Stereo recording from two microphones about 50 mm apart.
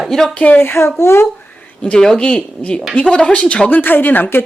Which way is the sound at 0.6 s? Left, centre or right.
Left.